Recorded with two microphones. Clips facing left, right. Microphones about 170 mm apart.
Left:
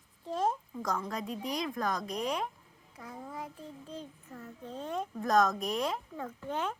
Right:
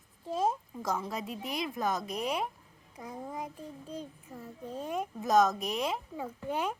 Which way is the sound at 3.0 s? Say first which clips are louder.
Right 3 dB; 20° right (ahead or behind).